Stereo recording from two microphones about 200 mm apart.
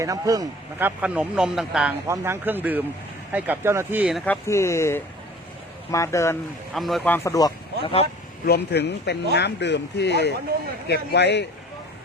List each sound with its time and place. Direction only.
0.0 s speech: 15° right (ahead or behind)
4.3 s speech: 15° left (ahead or behind)
6.7 s speech: centre (ahead or behind); by 8.0 s 25° left (ahead or behind)
8.4 s speech: 55° left (ahead or behind)